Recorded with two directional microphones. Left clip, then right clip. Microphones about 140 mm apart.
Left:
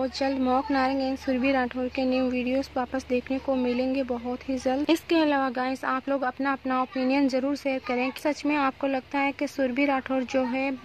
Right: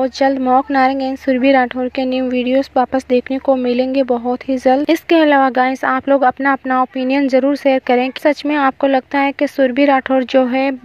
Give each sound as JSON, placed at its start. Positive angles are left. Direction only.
{"t": 0.0, "sound": "speech", "side_deg": -40}
{"t": 0.4, "sound": "a woman's voice", "side_deg": -25}
{"t": 0.7, "sound": "speech", "side_deg": -40}